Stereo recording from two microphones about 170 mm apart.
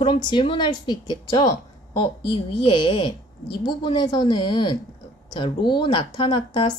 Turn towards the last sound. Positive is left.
turn(degrees=30)  # may be behind; listen again after turning